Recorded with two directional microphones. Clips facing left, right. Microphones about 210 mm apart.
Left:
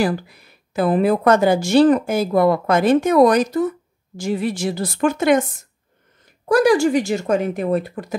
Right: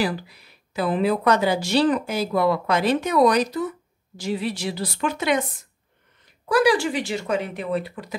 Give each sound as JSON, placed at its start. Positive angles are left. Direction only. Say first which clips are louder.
{"t": 0.0, "sound": "speech", "louder": "left 5 dB", "side_deg": 50}
{"t": 6.5, "sound": "speech", "louder": "left 5 dB", "side_deg": 45}